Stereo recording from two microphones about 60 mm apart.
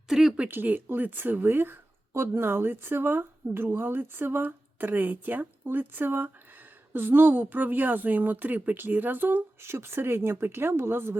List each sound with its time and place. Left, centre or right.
0.1 s speech: centre
0.3 s a woman's voice: right